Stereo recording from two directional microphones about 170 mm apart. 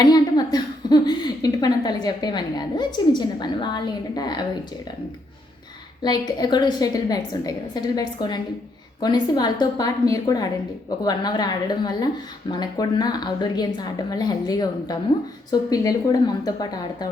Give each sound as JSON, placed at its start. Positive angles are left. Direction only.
{"t": 0.0, "sound": "a woman's voice", "side_deg": 25}
{"t": 6.0, "sound": "speech", "side_deg": 25}